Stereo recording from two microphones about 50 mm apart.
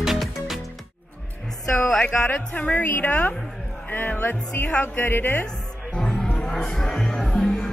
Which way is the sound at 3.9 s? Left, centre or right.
Left.